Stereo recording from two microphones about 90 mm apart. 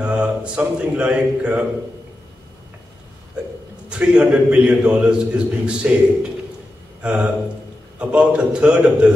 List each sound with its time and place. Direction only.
0.0 s speech: 10° right (ahead or behind)
3.9 s a man's voice: 10° right (ahead or behind)
7.0 s a man's voice: 15° right (ahead or behind)